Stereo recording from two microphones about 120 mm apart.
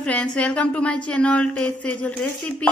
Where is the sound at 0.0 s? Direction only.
10° left (ahead or behind).